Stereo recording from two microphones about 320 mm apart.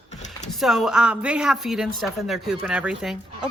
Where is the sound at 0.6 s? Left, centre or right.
Centre.